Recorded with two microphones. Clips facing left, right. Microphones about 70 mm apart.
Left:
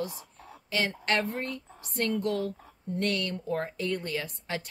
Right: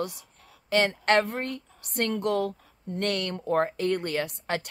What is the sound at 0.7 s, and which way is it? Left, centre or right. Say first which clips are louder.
Speech: right 6 dB; right.